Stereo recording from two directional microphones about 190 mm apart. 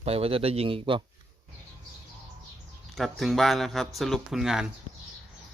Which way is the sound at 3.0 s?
Centre (ahead or behind).